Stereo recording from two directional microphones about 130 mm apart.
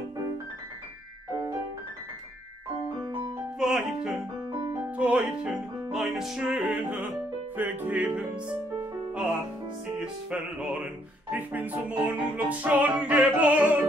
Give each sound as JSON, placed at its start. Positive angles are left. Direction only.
{"t": 3.5, "sound": "music", "side_deg": -5}